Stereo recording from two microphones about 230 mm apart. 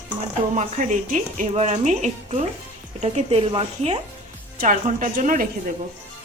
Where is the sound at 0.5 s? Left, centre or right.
Right.